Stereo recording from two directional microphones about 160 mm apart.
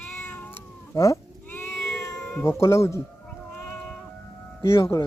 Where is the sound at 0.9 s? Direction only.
20° left (ahead or behind).